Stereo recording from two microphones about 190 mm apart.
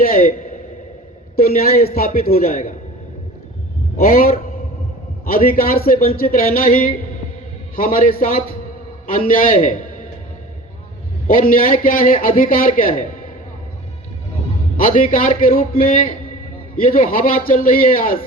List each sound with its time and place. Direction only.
0.0 s a man's voice: 50° left (ahead or behind)
3.9 s a man's voice: 50° left (ahead or behind)
11.3 s a man's voice: 45° left (ahead or behind)
14.8 s a man's voice: 45° left (ahead or behind)